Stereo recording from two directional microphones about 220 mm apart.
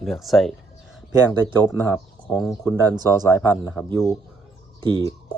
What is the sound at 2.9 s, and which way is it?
Speech, 15° right (ahead or behind).